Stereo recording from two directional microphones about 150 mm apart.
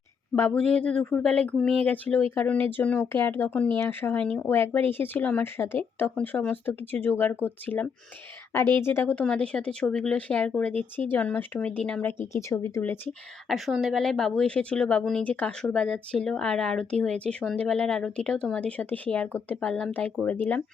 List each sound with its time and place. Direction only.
0.3 s a woman's voice: 10° left (ahead or behind)
12.3 s speech: 20° left (ahead or behind)
13.5 s a woman's voice: centre (ahead or behind)